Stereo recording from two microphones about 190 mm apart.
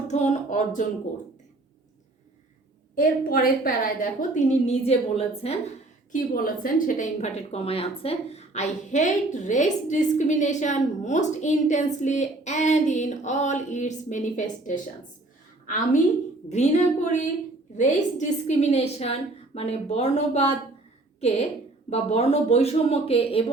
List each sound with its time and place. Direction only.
0.1 s a woman's voice: 40° left (ahead or behind)
2.9 s a woman's voice: 45° left (ahead or behind); by 5.5 s 30° left (ahead or behind)
6.1 s a woman's voice: 45° left (ahead or behind)
15.6 s a woman's voice: 45° left (ahead or behind)